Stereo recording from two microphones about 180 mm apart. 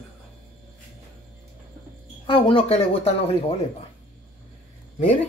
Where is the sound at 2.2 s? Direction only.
30° left (ahead or behind).